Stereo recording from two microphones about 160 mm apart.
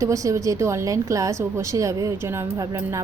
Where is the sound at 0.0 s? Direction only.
20° right (ahead or behind).